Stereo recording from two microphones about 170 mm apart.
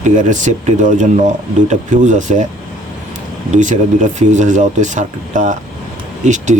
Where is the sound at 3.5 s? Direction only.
45° right (ahead or behind).